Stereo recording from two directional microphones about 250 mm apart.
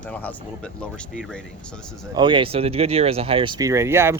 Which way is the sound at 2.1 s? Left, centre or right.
Centre.